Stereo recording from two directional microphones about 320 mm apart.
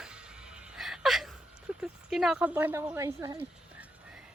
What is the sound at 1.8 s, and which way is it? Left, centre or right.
Speech, centre.